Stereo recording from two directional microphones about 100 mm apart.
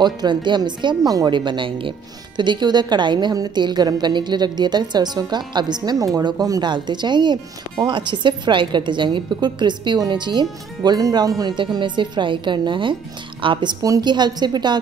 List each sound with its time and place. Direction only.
0.0 s speech: 50° right (ahead or behind)
11.5 s a woman's voice: 50° right (ahead or behind)
13.8 s speech: 40° right (ahead or behind)